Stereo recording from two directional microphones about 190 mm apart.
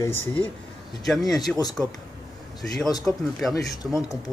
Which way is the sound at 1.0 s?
Centre (ahead or behind).